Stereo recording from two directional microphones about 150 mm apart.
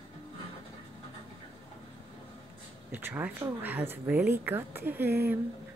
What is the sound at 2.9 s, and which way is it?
Speech, 10° right (ahead or behind).